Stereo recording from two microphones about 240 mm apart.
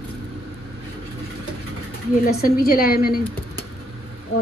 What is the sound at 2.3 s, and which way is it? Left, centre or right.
Speech, left.